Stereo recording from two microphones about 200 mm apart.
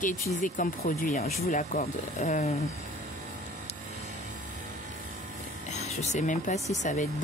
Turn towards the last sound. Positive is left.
turn(degrees=40)  # may be behind; listen again after turning